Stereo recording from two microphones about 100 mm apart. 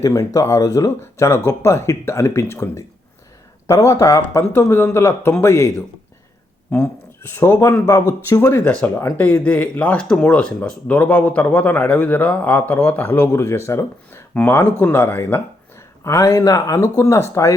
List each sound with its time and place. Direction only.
0.0 s speech: 35° left (ahead or behind)